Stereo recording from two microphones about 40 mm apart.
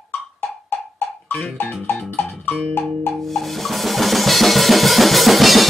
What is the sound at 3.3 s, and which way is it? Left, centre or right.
Drum kit, centre.